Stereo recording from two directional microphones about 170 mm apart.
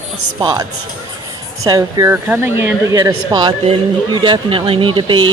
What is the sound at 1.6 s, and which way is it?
Speech, 20° right (ahead or behind).